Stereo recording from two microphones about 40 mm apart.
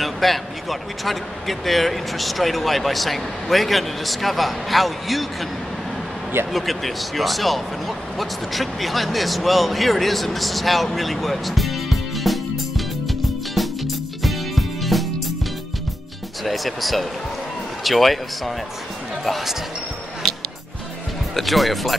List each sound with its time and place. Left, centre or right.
0.0 s speech: centre
6.5 s speech: centre
13.6 s music: centre
16.4 s speech: centre
21.4 s speech: centre